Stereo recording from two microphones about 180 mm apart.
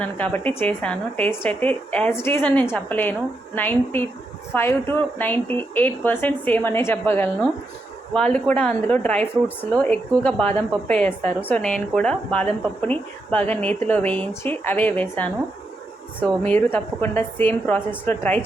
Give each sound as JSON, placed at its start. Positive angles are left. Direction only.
{"t": 0.0, "sound": "speech", "side_deg": 10}
{"t": 16.4, "sound": "speech", "side_deg": 10}